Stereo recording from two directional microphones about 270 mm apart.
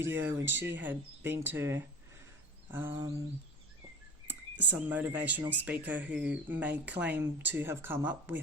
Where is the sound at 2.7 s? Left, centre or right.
Centre.